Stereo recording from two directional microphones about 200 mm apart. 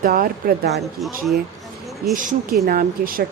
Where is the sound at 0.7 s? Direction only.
Centre (ahead or behind).